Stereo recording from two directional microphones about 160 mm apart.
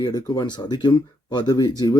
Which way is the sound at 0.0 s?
25° left (ahead or behind).